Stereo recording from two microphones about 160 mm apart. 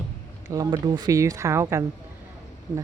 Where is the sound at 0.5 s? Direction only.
20° right (ahead or behind).